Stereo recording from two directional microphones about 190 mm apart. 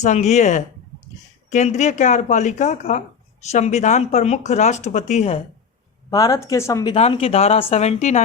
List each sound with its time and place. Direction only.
0.0 s speech: 35° left (ahead or behind)
6.1 s speech: 20° left (ahead or behind)
6.9 s speech: 30° left (ahead or behind)